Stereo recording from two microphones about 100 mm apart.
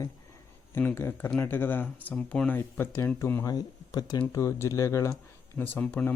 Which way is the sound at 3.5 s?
40° left (ahead or behind).